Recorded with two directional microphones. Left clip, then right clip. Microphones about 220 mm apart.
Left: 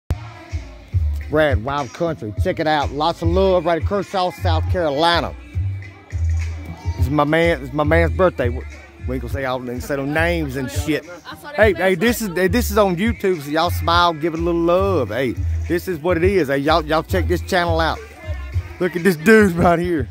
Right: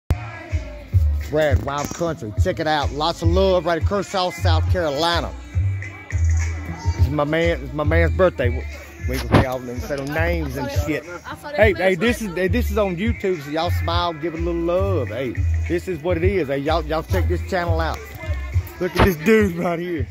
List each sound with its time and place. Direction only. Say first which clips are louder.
1.3 s speech: left 3 dB; 50° left (ahead or behind)
7.2 s speech: left 4 dB; 40° left (ahead or behind)
8.2 s speech: left 1 dB; 25° left (ahead or behind)
9.5 s speech: left 3 dB; 50° left (ahead or behind)
11.5 s speech: left 1 dB; 30° left (ahead or behind); by 17.9 s 50° left (ahead or behind)
19.0 s speech: left 6 dB; 35° left (ahead or behind)